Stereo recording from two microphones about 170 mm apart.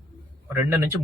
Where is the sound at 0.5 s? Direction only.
15° right (ahead or behind).